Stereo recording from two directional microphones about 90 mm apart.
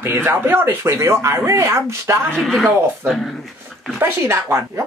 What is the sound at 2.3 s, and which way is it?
Speech, centre (ahead or behind).